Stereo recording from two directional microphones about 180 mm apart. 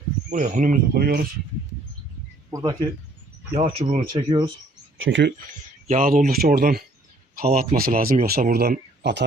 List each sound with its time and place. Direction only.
0.3 s speech: 45° right (ahead or behind)
2.5 s speech: 20° right (ahead or behind)
3.5 s speech: 35° right (ahead or behind)
4.1 s speech: 25° right (ahead or behind)
4.9 s speech: 90° right
5.9 s speech: 45° right (ahead or behind); by 9.2 s 65° right (ahead or behind)